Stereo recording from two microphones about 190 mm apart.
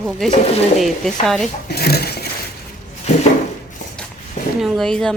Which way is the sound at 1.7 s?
55° left (ahead or behind).